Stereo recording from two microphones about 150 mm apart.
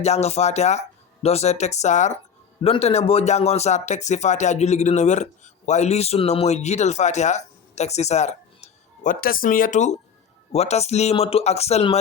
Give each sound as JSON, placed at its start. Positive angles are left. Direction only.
{"t": 0.0, "sound": "speech", "side_deg": 45}
{"t": 9.2, "sound": "speech", "side_deg": 70}